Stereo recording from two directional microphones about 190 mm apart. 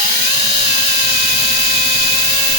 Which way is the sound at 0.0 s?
45° right (ahead or behind).